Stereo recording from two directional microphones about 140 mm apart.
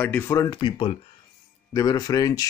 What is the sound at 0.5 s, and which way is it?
Speech, 35° left (ahead or behind).